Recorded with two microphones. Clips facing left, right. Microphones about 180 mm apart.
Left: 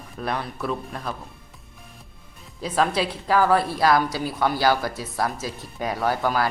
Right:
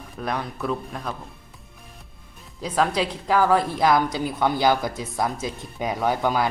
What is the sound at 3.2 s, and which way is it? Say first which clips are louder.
Speech: even; 10° right (ahead or behind).